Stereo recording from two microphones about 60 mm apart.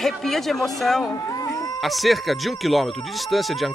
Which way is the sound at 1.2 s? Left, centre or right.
Left.